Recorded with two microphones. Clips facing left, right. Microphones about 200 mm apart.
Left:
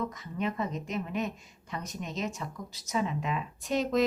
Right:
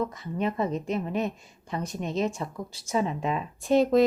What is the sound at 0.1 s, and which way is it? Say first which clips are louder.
Speech: right 4 dB; 30° right (ahead or behind).